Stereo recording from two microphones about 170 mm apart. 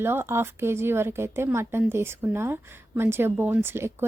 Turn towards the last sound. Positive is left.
turn(degrees=-15)  # may be behind; listen again after turning